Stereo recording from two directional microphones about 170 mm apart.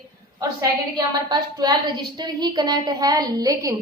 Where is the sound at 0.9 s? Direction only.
25° right (ahead or behind).